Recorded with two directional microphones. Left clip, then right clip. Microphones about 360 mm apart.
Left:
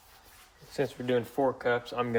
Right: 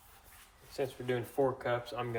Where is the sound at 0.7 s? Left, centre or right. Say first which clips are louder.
Left 6 dB; left.